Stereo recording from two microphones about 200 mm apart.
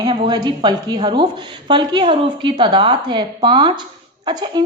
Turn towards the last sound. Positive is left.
turn(degrees=-20)  # may be behind; listen again after turning